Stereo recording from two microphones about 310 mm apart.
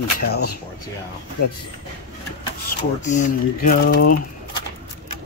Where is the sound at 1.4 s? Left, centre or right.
Left.